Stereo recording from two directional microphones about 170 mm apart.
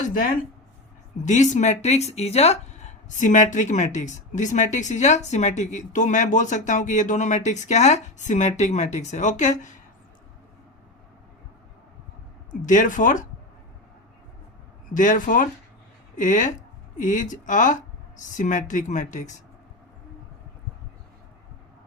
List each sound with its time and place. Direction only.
1.2 s speech: 45° left (ahead or behind)
12.5 s speech: 50° left (ahead or behind)
14.9 s speech: 50° left (ahead or behind)